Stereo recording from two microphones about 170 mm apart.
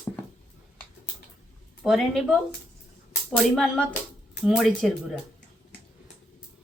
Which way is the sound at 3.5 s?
5° left (ahead or behind).